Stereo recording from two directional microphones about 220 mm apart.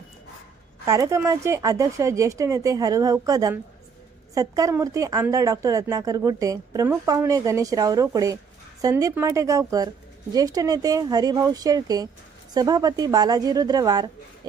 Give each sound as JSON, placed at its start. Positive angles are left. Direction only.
{"t": 0.9, "sound": "a woman's voice", "side_deg": -15}